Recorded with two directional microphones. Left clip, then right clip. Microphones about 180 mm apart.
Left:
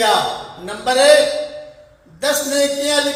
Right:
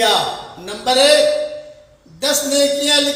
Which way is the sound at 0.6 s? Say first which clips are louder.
Left 1 dB; 20° right (ahead or behind).